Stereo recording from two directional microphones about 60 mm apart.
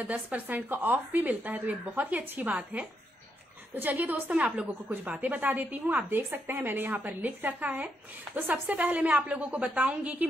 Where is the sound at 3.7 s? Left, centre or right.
Right.